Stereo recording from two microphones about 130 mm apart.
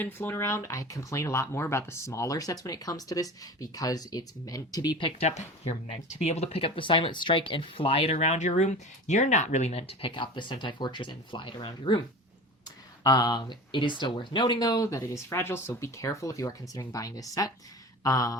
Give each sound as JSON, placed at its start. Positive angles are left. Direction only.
{"t": 0.0, "sound": "speech", "side_deg": 15}
{"t": 4.9, "sound": "speech", "side_deg": 45}
{"t": 6.1, "sound": "speech", "side_deg": 55}
{"t": 10.1, "sound": "speech", "side_deg": 40}
{"t": 13.0, "sound": "speech", "side_deg": 30}